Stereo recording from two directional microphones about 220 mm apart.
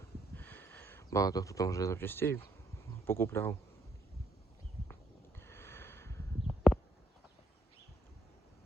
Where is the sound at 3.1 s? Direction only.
10° left (ahead or behind).